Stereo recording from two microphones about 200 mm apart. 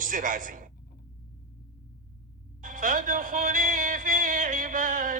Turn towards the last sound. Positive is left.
turn(degrees=-40)  # may be behind; listen again after turning